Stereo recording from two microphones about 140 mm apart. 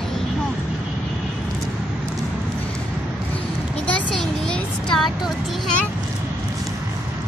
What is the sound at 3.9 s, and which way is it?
Speech, 5° left (ahead or behind).